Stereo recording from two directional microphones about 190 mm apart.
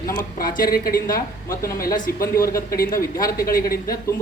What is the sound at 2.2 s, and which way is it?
Speech, 15° left (ahead or behind).